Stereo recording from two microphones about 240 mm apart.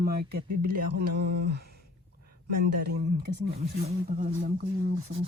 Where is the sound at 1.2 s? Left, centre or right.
Right.